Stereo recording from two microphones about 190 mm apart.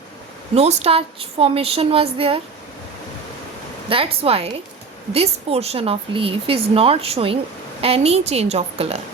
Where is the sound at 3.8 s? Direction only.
30° right (ahead or behind).